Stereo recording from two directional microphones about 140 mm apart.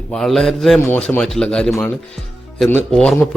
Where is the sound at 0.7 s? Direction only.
15° left (ahead or behind).